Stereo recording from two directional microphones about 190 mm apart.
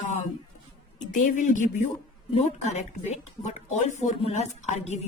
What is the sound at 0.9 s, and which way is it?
Speech, 40° left (ahead or behind).